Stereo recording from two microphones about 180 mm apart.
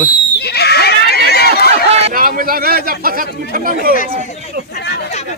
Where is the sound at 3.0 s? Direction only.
55° right (ahead or behind).